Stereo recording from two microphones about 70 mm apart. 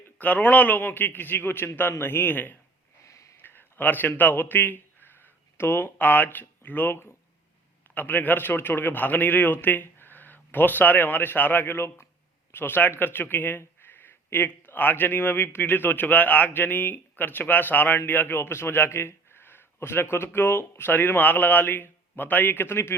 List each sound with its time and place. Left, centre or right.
0.2 s speech: left
3.1 s a sound: left
3.3 s a man's voice: left